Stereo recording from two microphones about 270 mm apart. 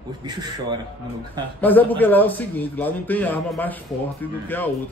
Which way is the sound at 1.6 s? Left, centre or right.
Centre.